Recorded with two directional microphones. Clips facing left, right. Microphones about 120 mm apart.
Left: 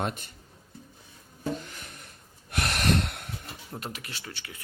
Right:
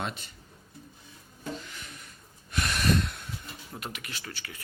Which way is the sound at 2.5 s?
70° left (ahead or behind).